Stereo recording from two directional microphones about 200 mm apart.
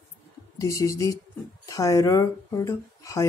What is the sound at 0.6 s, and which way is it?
Speech, 15° left (ahead or behind).